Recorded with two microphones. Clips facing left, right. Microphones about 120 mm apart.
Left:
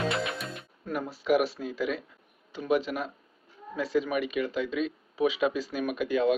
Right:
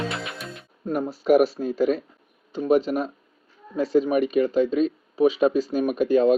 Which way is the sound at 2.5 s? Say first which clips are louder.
Right 7 dB; 40° right (ahead or behind).